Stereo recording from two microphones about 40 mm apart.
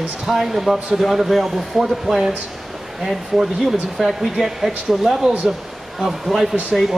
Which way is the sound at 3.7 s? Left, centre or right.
Centre.